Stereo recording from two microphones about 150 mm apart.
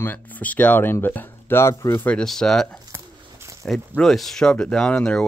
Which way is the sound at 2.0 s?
5° left (ahead or behind).